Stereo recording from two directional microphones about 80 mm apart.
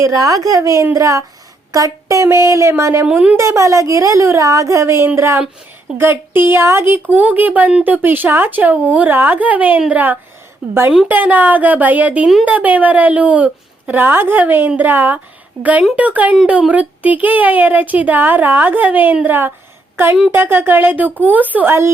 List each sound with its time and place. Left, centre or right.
0.0 s a woman's voice: right
3.1 s speech: centre
3.3 s a woman's voice: right